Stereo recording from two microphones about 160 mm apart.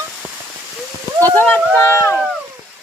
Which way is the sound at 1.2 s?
10° left (ahead or behind).